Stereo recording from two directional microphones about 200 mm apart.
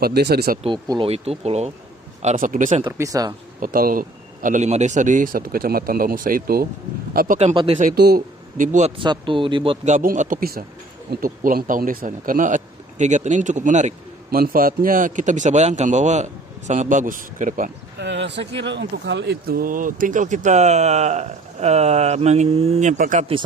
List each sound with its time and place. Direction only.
0.0 s a man's voice: 55° right (ahead or behind)
0.6 s speech: 25° right (ahead or behind)
2.2 s speech: 40° right (ahead or behind)
2.8 s speech: 15° right (ahead or behind)
3.6 s a man's voice: 45° right (ahead or behind)
7.3 s speech: 30° right (ahead or behind)
7.8 s speech: 50° right (ahead or behind)
9.0 s speech: 25° right (ahead or behind)
9.8 s a man's voice: 40° right (ahead or behind)
18.0 s speech: 60° right (ahead or behind); by 23.2 s 40° right (ahead or behind)